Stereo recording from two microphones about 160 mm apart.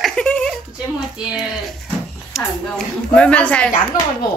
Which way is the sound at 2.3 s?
5° left (ahead or behind).